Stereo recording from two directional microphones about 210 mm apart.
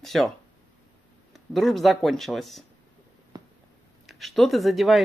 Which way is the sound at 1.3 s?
Centre (ahead or behind).